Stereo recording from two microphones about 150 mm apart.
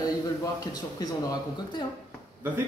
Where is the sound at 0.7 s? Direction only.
25° left (ahead or behind).